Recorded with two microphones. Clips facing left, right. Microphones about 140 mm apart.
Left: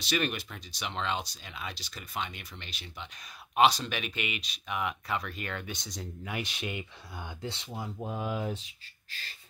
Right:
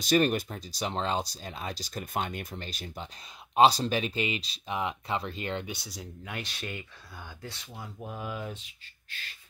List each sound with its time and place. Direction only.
0.0 s speech: 40° right (ahead or behind); by 5.7 s 25° right (ahead or behind)
5.7 s speech: 5° right (ahead or behind)
6.3 s speech: 15° left (ahead or behind)